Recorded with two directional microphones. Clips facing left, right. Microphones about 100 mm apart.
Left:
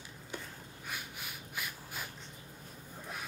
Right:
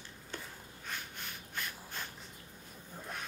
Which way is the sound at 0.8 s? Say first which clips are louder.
Even; 10° left (ahead or behind).